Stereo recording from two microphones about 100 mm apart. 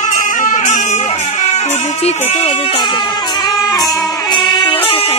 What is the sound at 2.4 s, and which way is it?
Music, 80° left.